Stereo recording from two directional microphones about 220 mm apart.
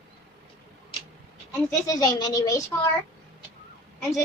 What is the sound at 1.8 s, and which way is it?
Speech, 15° left (ahead or behind).